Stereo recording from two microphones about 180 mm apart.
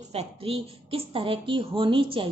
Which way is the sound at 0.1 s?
35° right (ahead or behind).